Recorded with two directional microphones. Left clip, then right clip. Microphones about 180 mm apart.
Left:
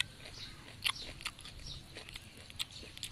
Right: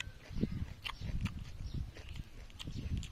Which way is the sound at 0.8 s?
10° right (ahead or behind).